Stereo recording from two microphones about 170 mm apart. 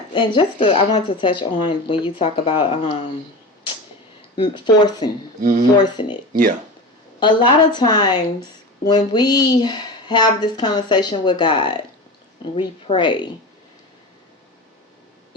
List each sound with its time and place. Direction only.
0.1 s a woman's voice: 25° left (ahead or behind)
0.7 s speech: 40° left (ahead or behind)
4.5 s a woman's voice: 25° left (ahead or behind)
5.4 s speech: 50° right (ahead or behind)
5.7 s a woman's voice: 25° left (ahead or behind)
7.2 s a woman's voice: 30° left (ahead or behind)